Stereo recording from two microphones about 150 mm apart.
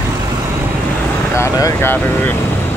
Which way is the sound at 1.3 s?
20° left (ahead or behind).